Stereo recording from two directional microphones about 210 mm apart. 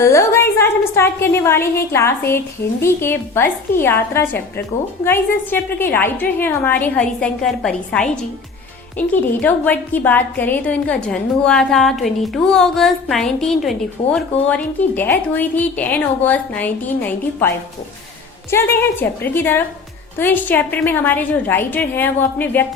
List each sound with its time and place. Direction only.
0.0 s a woman's voice: 15° left (ahead or behind)
18.5 s a woman's voice: 10° left (ahead or behind)